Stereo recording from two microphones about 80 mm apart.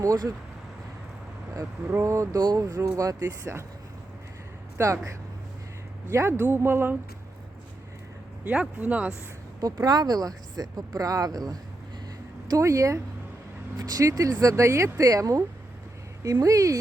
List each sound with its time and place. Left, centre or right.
1.9 s speech: right
2.4 s speech: right
4.8 s speech: right
8.4 s speech: centre
9.6 s speech: right
12.5 s speech: right
13.7 s speech: right